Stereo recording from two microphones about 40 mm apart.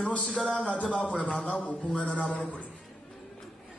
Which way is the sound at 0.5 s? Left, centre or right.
Left.